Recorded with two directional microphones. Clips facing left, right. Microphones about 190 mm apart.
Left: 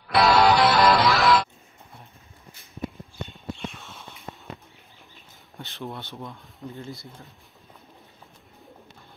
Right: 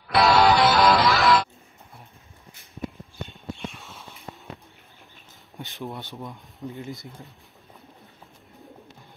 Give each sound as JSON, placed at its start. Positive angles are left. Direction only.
{"t": 0.1, "sound": "music", "side_deg": 0}
{"t": 3.3, "sound": "a sound", "side_deg": 0}
{"t": 5.6, "sound": "speech", "side_deg": -15}